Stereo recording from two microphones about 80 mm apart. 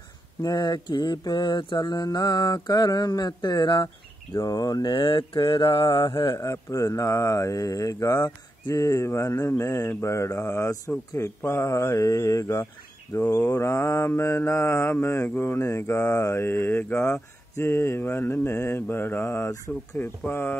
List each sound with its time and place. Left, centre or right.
0.4 s mantra: left
2.0 s mantra: left
4.4 s mantra: left
6.3 s speech: left
8.8 s mantra: left
20.0 s speech: left